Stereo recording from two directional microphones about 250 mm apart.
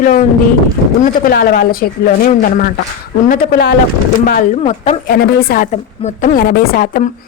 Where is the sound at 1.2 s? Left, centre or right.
Left.